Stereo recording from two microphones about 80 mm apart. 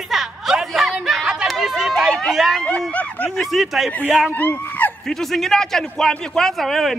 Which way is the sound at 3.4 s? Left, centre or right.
Centre.